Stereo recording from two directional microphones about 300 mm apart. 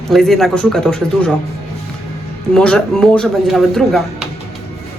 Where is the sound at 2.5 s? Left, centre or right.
Centre.